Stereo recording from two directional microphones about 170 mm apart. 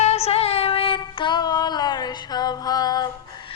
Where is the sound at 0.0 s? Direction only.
40° left (ahead or behind); by 3.1 s 25° left (ahead or behind).